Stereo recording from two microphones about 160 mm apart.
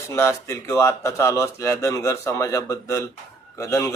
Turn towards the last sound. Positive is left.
turn(degrees=20)  # may be behind; listen again after turning